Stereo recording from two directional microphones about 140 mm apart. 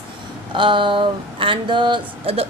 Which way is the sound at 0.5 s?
35° right (ahead or behind).